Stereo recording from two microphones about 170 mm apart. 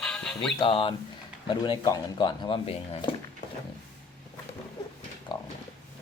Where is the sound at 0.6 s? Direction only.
30° left (ahead or behind).